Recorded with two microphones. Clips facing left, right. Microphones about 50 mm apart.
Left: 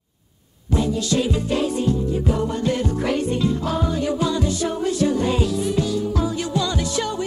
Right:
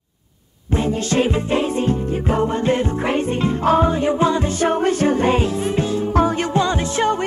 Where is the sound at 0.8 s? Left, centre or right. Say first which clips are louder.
Right 3 dB; right.